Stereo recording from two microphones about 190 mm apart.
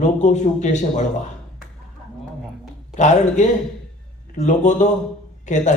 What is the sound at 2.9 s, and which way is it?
A man's voice, 40° left (ahead or behind).